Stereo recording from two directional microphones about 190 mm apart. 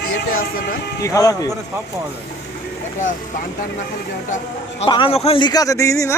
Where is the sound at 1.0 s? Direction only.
20° left (ahead or behind).